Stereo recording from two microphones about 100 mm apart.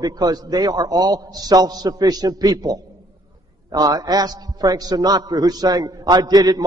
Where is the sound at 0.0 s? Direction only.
40° right (ahead or behind).